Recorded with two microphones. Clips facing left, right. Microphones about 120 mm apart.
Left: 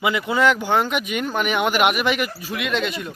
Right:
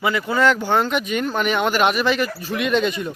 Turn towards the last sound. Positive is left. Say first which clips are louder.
# right 4 dB
turn(degrees=0)  # may be behind; listen again after turning